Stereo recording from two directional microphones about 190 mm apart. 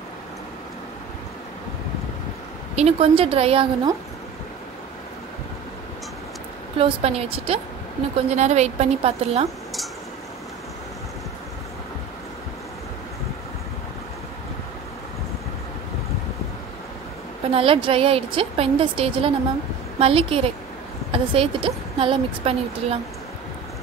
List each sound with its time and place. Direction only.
2.7 s speech: 30° right (ahead or behind)
6.8 s a woman's voice: 30° right (ahead or behind)
17.5 s a woman's voice: 30° right (ahead or behind)